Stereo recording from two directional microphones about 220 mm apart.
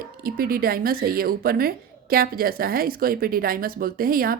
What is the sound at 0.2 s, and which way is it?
Speech, 40° right (ahead or behind).